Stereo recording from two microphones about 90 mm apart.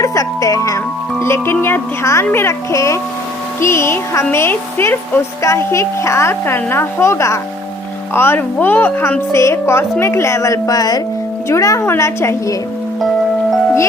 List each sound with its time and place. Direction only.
0.0 s music: 35° left (ahead or behind)
1.2 s a woman's voice: 30° left (ahead or behind)